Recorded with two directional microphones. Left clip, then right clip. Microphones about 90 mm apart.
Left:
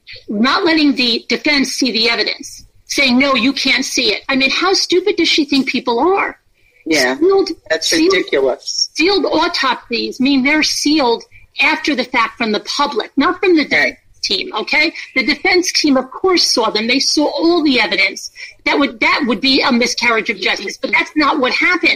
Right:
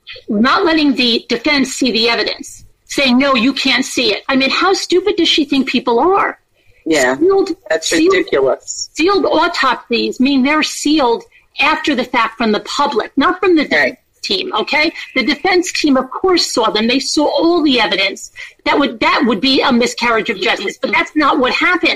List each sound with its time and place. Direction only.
0.4 s a woman's voice: 20° right (ahead or behind)
16.0 s a woman's voice: centre (ahead or behind)
16.5 s a woman's voice: 20° right (ahead or behind)